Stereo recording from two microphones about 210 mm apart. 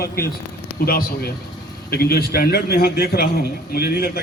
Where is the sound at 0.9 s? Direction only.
45° left (ahead or behind).